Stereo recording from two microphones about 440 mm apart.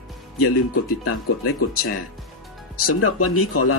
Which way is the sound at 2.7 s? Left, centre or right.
Left.